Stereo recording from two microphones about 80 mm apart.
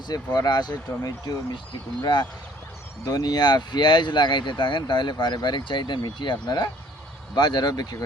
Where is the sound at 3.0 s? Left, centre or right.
Left.